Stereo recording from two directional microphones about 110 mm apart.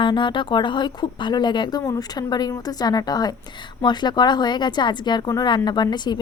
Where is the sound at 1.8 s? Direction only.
30° left (ahead or behind).